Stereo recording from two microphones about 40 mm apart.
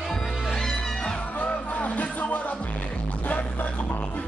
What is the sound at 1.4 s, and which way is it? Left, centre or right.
Music, left.